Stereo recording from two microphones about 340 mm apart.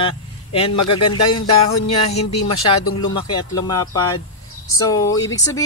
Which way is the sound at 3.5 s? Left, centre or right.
Centre.